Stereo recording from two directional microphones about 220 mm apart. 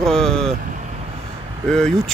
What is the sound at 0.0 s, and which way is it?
Vehicle, centre (ahead or behind).